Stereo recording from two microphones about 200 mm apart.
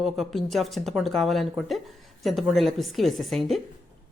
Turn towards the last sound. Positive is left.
turn(degrees=0)  # may be behind; listen again after turning